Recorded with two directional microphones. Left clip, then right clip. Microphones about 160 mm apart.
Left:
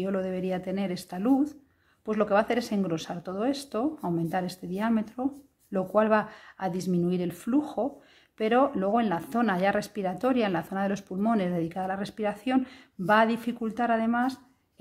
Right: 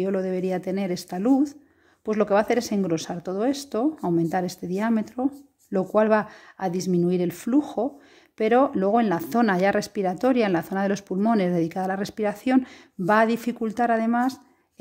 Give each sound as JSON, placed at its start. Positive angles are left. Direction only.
{"t": 0.0, "sound": "speech", "side_deg": -30}